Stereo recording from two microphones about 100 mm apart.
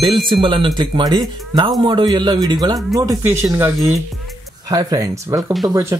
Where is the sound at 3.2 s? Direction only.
25° right (ahead or behind).